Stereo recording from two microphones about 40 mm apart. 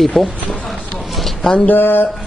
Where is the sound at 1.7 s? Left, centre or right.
Left.